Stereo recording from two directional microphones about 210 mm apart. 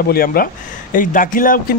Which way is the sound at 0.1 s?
45° left (ahead or behind).